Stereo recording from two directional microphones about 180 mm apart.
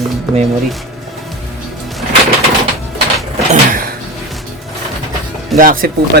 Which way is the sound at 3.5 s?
50° right (ahead or behind).